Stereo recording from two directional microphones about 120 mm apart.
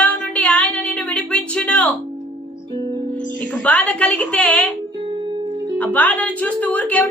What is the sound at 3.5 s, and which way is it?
A woman's voice, 10° left (ahead or behind).